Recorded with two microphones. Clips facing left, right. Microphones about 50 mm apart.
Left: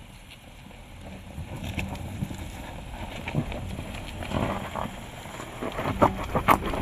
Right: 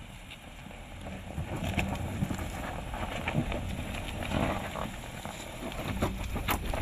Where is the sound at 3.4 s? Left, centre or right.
Right.